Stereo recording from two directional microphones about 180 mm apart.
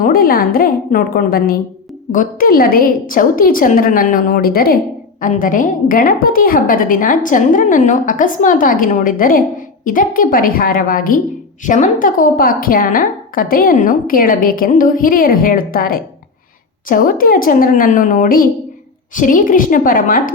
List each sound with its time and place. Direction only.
0.0 s a woman's voice: 50° left (ahead or behind)